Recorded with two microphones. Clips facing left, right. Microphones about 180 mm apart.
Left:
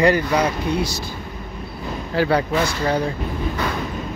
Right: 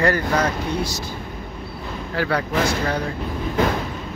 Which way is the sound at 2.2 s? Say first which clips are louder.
Left 4 dB; 25° left (ahead or behind).